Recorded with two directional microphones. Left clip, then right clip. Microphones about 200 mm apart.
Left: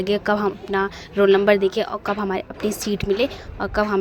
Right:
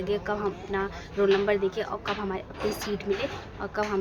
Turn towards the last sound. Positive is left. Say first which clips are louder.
# left 8 dB
turn(degrees=45)  # may be behind; listen again after turning